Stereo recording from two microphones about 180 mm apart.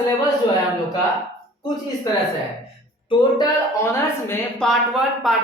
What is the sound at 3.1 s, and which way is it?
Speech, 25° left (ahead or behind).